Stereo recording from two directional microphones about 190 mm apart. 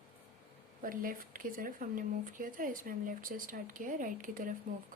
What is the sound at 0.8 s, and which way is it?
Speech, 45° right (ahead or behind).